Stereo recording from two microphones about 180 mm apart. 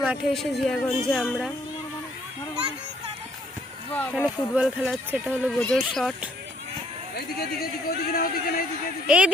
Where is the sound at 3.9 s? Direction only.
5° left (ahead or behind).